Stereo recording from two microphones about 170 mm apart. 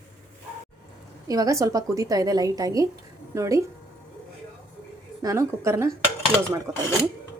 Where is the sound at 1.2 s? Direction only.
20° right (ahead or behind).